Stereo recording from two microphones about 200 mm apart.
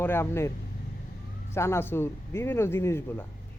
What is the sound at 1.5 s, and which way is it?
Speech, 15° left (ahead or behind).